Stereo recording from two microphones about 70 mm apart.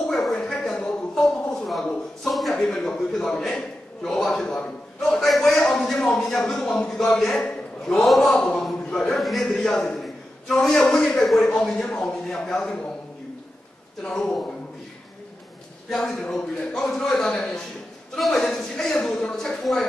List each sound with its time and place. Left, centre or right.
0.1 s a sound: centre
5.2 s a man's voice: centre
14.0 s a man's voice: centre
15.9 s a man's voice: centre